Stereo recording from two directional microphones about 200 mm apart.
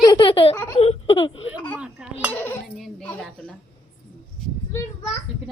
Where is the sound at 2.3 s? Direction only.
10° left (ahead or behind).